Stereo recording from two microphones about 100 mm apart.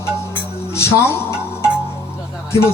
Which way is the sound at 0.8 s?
25° left (ahead or behind).